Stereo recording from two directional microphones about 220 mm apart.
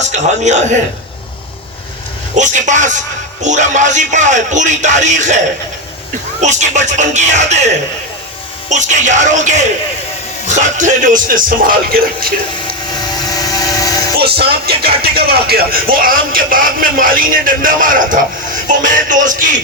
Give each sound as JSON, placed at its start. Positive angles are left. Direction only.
{"t": 0.1, "sound": "speech", "side_deg": -35}
{"t": 2.3, "sound": "speech", "side_deg": -35}
{"t": 6.4, "sound": "speech", "side_deg": -35}
{"t": 12.9, "sound": "vehicle", "side_deg": 20}
{"t": 14.3, "sound": "speech", "side_deg": -45}